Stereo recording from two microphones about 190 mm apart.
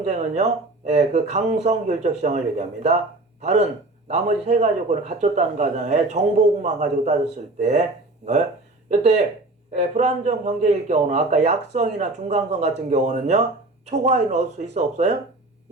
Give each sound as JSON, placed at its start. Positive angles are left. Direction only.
{"t": 0.0, "sound": "a man's voice", "side_deg": -35}
{"t": 8.9, "sound": "a man's voice", "side_deg": -35}